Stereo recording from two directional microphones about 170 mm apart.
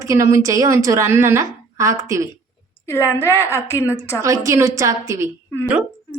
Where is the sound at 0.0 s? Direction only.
15° right (ahead or behind).